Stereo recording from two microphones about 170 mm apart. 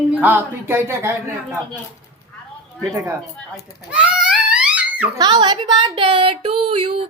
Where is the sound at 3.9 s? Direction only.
5° right (ahead or behind).